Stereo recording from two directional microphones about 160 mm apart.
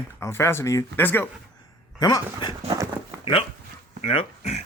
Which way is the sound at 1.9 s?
25° left (ahead or behind).